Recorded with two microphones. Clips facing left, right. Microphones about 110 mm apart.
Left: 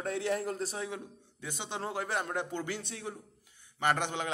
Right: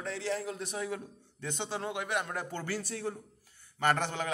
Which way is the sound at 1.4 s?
10° left (ahead or behind).